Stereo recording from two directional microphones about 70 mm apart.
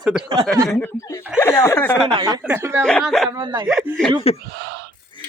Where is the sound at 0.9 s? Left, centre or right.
Left.